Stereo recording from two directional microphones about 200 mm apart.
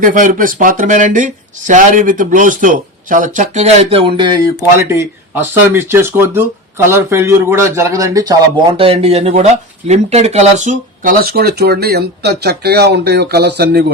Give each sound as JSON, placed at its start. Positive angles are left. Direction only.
{"t": 0.0, "sound": "speech", "side_deg": -40}
{"t": 4.9, "sound": "speech", "side_deg": -10}